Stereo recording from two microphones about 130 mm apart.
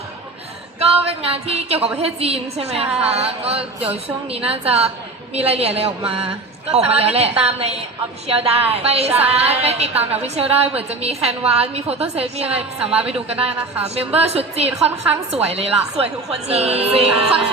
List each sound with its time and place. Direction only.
0.8 s a woman's voice: 50° right (ahead or behind)
2.8 s speech: 10° right (ahead or behind)
3.2 s a woman's voice: 50° right (ahead or behind)
9.9 s speech: 10° right (ahead or behind)
10.2 s a woman's voice: 50° right (ahead or behind)